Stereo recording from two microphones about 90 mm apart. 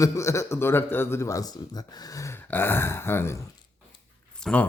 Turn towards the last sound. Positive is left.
turn(degrees=10)  # may be behind; listen again after turning